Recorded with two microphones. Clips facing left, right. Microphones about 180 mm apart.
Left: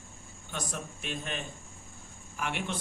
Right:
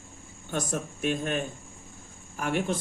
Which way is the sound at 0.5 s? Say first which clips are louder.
Right 7 dB; 50° right (ahead or behind).